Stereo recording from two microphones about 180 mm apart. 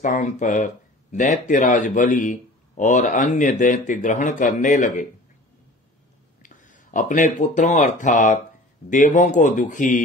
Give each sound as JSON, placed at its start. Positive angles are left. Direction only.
{"t": 0.0, "sound": "a man's voice", "side_deg": 45}
{"t": 6.4, "sound": "a man's voice", "side_deg": 45}